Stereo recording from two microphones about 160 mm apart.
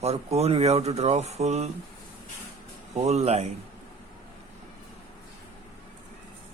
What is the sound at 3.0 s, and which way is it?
Speech, 45° right (ahead or behind).